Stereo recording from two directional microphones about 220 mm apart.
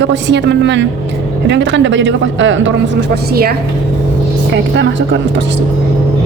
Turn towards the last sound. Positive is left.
turn(degrees=-55)  # may be behind; listen again after turning